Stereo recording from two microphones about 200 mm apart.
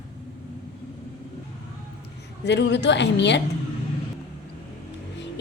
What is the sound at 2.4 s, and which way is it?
A woman's voice, 60° left (ahead or behind).